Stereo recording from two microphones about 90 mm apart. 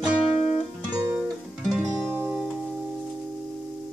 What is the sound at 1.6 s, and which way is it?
Music, 5° right (ahead or behind).